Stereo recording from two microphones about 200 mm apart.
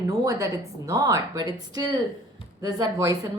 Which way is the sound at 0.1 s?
15° right (ahead or behind).